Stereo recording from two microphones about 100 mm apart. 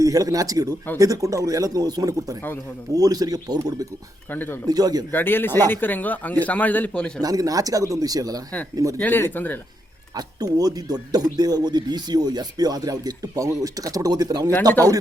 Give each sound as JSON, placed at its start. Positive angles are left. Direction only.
{"t": 0.0, "sound": "speech", "side_deg": -35}
{"t": 4.3, "sound": "speech", "side_deg": 20}
{"t": 4.7, "sound": "speech", "side_deg": -40}
{"t": 5.1, "sound": "speech", "side_deg": 20}
{"t": 7.2, "sound": "speech", "side_deg": -40}
{"t": 9.0, "sound": "speech", "side_deg": 20}
{"t": 10.2, "sound": "speech", "side_deg": -40}